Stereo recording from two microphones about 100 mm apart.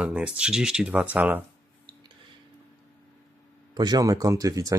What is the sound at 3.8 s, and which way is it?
Speech, 40° right (ahead or behind).